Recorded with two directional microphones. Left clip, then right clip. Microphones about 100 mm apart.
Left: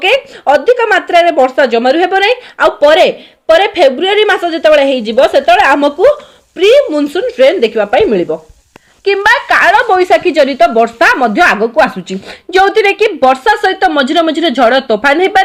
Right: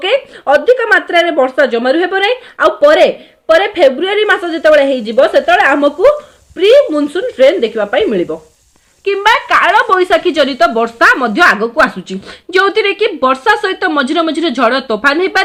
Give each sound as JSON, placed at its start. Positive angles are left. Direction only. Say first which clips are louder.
{"t": 0.0, "sound": "speech", "louder": "left 3 dB", "side_deg": 60}
{"t": 8.3, "sound": "speech", "louder": "left 5 dB", "side_deg": 55}
{"t": 9.9, "sound": "speech", "louder": "left 2 dB", "side_deg": 20}